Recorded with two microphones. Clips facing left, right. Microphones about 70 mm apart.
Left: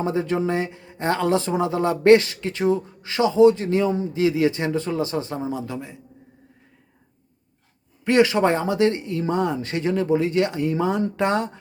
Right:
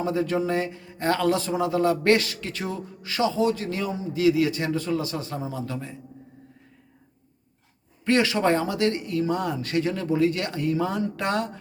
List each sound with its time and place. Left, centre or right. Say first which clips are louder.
0.0 s speech: left 2 dB; left
8.0 s speech: left 4 dB; left